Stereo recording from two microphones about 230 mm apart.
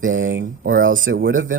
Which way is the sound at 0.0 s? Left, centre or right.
Right.